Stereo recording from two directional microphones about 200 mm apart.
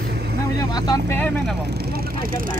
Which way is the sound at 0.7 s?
15° left (ahead or behind).